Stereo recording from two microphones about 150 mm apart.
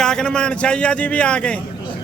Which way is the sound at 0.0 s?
5° left (ahead or behind).